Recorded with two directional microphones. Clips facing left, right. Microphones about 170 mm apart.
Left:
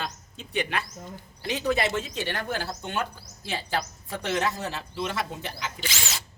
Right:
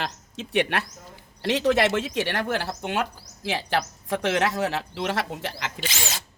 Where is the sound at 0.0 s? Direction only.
80° right.